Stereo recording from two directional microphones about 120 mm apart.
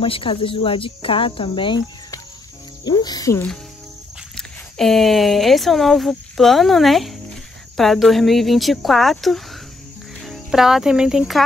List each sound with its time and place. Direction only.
0.0 s speech: 50° left (ahead or behind)
2.8 s speech: 35° left (ahead or behind)
4.4 s speech: centre (ahead or behind)
10.2 s cricket: centre (ahead or behind)